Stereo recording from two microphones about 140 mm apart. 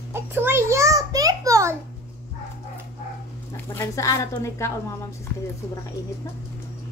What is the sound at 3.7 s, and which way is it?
Speech, 20° left (ahead or behind).